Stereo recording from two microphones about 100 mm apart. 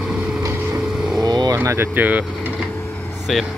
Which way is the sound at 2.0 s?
15° right (ahead or behind).